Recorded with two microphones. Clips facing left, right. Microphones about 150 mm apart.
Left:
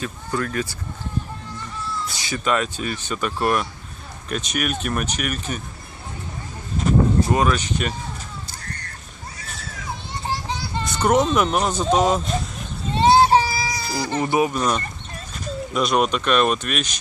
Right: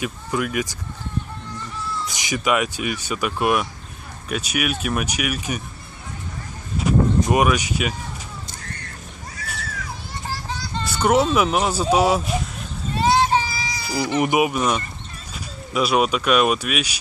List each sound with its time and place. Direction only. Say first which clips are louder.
0.0 s speech: right 1 dB; 10° right (ahead or behind)
2.1 s speech: right 2 dB; 15° right (ahead or behind)
6.8 s a sound: even; 10° right (ahead or behind)
10.5 s a sound: left 2 dB; 10° left (ahead or behind)
11.1 s speech: right 1 dB; 5° right (ahead or behind)
12.9 s child singing: left 4 dB; 30° left (ahead or behind)
13.8 s speech: right 5 dB; 15° right (ahead or behind)